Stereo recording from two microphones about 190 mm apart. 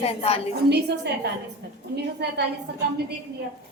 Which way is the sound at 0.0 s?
30° left (ahead or behind).